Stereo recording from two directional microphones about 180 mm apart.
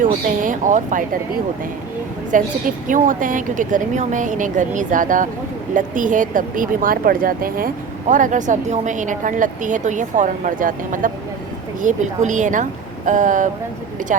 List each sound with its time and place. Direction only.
0.0 s speech: 45° right (ahead or behind)